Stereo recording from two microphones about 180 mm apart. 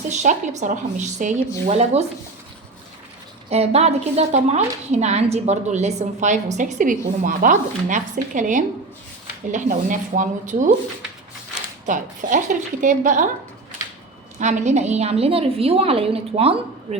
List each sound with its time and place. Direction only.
0.1 s a woman's voice: 40° right (ahead or behind)
3.5 s a woman's voice: 35° right (ahead or behind)
11.9 s a woman's voice: 45° right (ahead or behind)
14.3 s a woman's voice: 40° right (ahead or behind)